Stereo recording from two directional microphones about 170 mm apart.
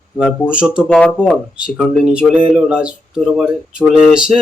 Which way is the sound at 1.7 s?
5° right (ahead or behind).